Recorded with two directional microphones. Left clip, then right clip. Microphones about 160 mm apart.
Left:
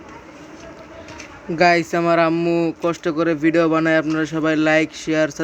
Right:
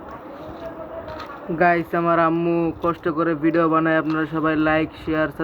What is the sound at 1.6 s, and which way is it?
Speech, 50° left (ahead or behind).